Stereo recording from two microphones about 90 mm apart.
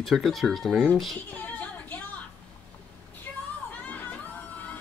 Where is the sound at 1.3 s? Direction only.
20° left (ahead or behind).